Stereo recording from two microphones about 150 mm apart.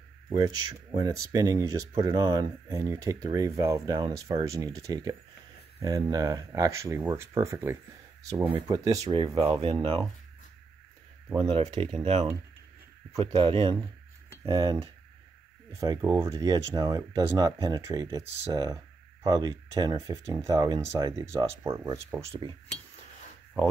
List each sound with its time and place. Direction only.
0.4 s speech: 25° right (ahead or behind)
9.4 s speech: 40° right (ahead or behind)
11.4 s speech: 45° right (ahead or behind); by 22.2 s 20° right (ahead or behind)
22.4 s cutlery: 30° left (ahead or behind)